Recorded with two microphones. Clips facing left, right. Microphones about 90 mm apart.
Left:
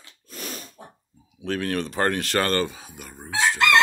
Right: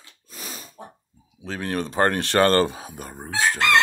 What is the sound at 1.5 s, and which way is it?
Speech, 25° right (ahead or behind).